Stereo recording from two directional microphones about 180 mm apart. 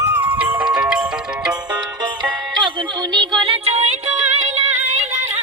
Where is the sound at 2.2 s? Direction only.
25° right (ahead or behind).